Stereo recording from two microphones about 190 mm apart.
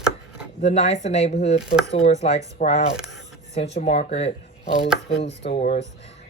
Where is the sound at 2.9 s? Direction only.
Centre (ahead or behind).